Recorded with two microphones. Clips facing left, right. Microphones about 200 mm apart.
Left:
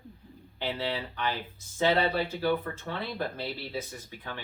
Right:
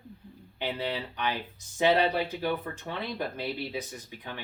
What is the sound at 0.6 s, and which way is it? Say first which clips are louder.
Speech: even; 15° right (ahead or behind).